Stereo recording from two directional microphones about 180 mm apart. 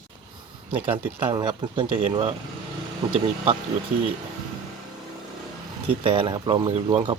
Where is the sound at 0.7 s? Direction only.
30° right (ahead or behind).